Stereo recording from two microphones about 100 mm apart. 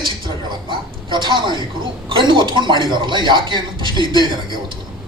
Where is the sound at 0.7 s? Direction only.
50° right (ahead or behind).